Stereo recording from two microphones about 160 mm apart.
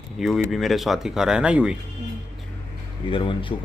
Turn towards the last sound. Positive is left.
turn(degrees=30)  # may be behind; listen again after turning